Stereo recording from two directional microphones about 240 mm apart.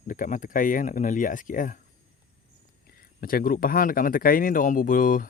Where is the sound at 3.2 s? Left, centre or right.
Left.